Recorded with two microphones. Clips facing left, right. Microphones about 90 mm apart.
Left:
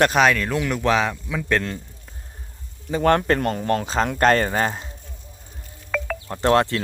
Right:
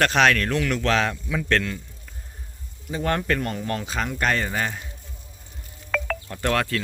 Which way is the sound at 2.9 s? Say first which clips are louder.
Left 6 dB; 55° left (ahead or behind).